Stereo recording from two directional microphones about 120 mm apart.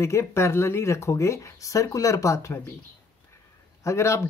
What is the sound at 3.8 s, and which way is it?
Speech, 25° left (ahead or behind).